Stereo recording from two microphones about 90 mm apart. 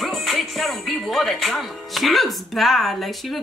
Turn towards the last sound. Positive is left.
turn(degrees=0)  # may be behind; listen again after turning